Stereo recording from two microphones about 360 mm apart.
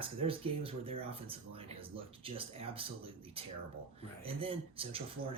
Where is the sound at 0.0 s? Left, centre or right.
Centre.